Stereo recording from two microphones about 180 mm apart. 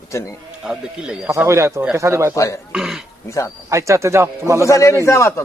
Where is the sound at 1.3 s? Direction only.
15° right (ahead or behind).